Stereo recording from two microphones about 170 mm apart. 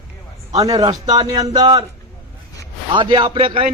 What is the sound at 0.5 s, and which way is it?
A man's voice, 20° right (ahead or behind).